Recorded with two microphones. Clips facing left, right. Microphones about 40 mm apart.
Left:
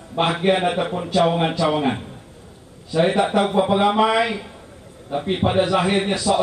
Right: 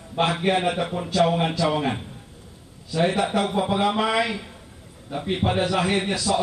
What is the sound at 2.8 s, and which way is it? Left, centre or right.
A man's voice, left.